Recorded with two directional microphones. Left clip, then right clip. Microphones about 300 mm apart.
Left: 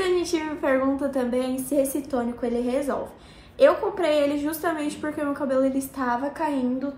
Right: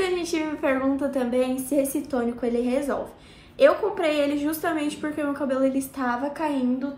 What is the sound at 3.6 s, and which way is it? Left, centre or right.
A woman's voice, centre.